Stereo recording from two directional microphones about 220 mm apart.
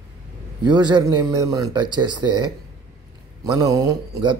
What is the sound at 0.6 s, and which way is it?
Speech, 20° right (ahead or behind).